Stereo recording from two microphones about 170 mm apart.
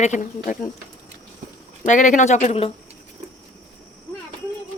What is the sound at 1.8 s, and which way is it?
Speech, 50° left (ahead or behind).